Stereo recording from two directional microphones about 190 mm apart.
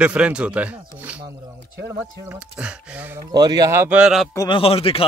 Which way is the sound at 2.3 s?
5° right (ahead or behind).